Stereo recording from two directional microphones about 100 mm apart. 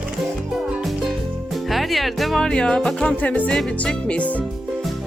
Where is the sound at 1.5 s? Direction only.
Centre (ahead or behind).